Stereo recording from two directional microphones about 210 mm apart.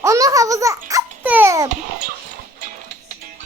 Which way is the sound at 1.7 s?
40° right (ahead or behind).